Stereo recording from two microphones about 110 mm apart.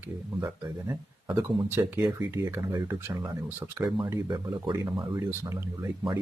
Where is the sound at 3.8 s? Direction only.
40° right (ahead or behind).